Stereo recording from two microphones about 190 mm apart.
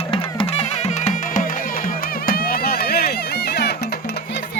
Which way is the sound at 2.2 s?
50° left (ahead or behind).